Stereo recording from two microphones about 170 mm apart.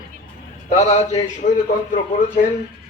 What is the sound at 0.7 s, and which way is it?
Speech, 40° left (ahead or behind).